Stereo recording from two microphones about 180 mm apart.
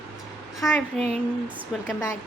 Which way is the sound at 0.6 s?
Centre (ahead or behind).